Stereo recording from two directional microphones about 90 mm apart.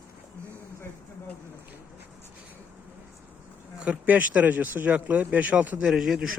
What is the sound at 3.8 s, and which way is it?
Speech, 15° right (ahead or behind).